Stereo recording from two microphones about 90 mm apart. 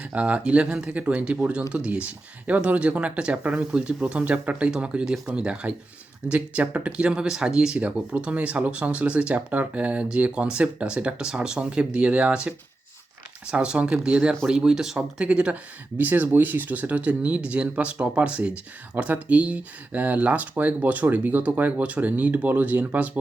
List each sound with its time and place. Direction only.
0.0 s speech: 15° right (ahead or behind)
13.5 s speech: 10° right (ahead or behind)